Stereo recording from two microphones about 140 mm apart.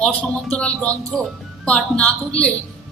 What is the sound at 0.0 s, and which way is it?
A woman's voice, 5° left (ahead or behind).